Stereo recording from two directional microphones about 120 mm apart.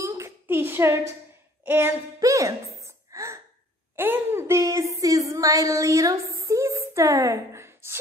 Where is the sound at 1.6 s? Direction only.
20° right (ahead or behind).